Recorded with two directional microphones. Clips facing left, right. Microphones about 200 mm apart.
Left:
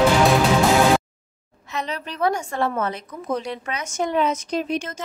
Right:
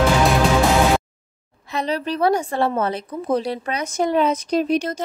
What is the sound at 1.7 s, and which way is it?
A woman's voice, 35° right (ahead or behind).